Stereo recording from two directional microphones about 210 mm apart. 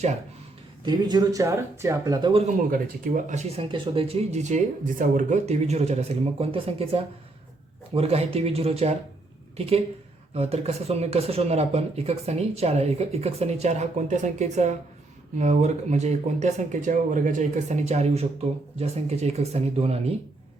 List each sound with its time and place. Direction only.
0.9 s speech: 20° right (ahead or behind)
2.6 s speech: 40° right (ahead or behind)